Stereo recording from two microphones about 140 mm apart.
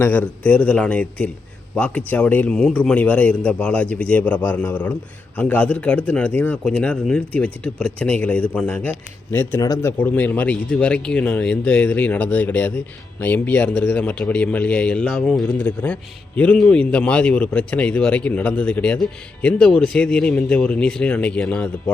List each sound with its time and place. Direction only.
0.0 s a man's voice: 10° left (ahead or behind)
10.0 s a man's voice: 15° left (ahead or behind)